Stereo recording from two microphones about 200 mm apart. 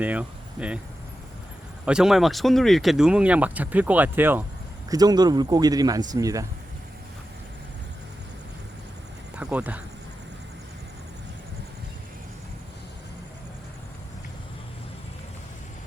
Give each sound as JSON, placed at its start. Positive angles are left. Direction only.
{"t": 0.0, "sound": "speech", "side_deg": -5}
{"t": 1.8, "sound": "speech", "side_deg": -5}
{"t": 9.3, "sound": "speech", "side_deg": -5}